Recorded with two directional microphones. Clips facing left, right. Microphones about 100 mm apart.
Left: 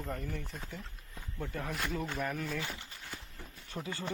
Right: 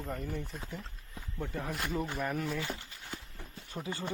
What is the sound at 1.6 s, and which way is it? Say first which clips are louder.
Speech: right 2 dB; 5° right (ahead or behind).